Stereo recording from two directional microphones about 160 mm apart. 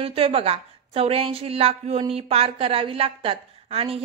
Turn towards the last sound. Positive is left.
turn(degrees=-35)  # may be behind; listen again after turning